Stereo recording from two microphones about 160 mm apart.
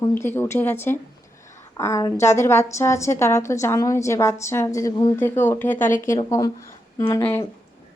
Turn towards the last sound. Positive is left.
turn(degrees=15)  # may be behind; listen again after turning